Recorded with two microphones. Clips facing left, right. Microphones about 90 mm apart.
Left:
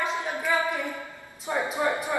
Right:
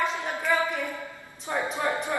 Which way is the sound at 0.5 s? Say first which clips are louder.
Right 1 dB; centre (ahead or behind).